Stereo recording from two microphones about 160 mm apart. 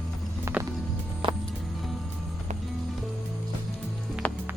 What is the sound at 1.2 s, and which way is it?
Music, 30° right (ahead or behind).